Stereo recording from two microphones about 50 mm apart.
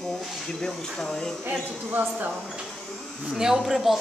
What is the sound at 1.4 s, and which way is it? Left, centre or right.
Speech, right.